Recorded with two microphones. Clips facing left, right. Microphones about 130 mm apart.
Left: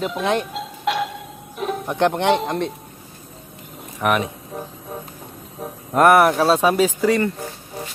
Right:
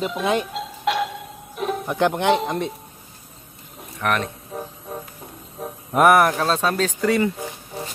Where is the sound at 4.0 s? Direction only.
5° left (ahead or behind).